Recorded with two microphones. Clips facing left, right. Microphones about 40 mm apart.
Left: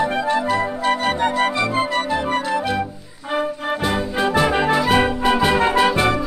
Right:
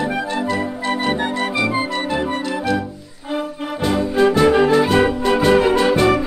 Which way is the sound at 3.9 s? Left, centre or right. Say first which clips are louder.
Right 6 dB; centre.